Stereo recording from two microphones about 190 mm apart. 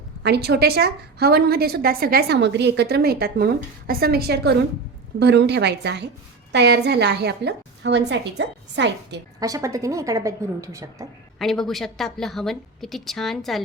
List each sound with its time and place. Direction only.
0.2 s a woman's voice: 60° right (ahead or behind)
9.4 s a woman's voice: 15° right (ahead or behind)
11.3 s a woman's voice: centre (ahead or behind)